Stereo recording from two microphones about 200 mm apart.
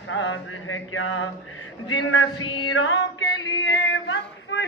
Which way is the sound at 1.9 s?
85° left.